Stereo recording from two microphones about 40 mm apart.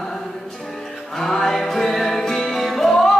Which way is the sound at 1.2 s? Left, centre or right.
Centre.